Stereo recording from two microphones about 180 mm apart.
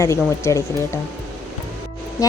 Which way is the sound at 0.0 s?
15° left (ahead or behind).